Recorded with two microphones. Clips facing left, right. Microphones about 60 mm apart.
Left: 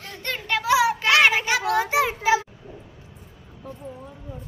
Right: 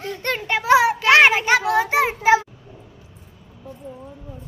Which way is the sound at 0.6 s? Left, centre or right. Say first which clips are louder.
Right 4 dB; right.